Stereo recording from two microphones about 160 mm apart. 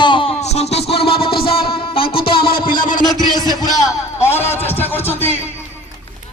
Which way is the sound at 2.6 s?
60° left (ahead or behind).